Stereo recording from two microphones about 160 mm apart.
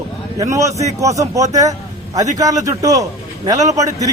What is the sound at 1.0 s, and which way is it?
A man's voice, 20° right (ahead or behind).